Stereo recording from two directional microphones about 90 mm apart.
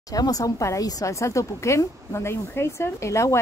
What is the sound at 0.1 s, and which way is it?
A woman's voice, 40° left (ahead or behind).